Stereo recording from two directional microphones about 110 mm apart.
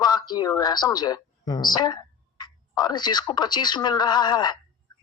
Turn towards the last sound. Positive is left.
turn(degrees=40)  # may be behind; listen again after turning